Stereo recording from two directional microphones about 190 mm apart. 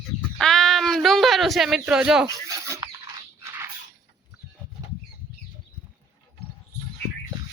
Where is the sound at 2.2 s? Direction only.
15° right (ahead or behind).